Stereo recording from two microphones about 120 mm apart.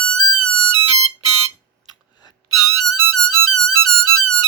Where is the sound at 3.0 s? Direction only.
30° left (ahead or behind).